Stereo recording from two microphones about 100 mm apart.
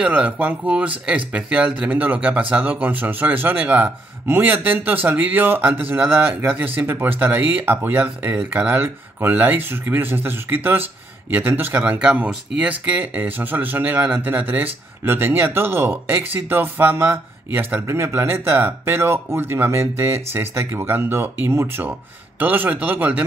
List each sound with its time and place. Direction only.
0.0 s speech: 15° right (ahead or behind)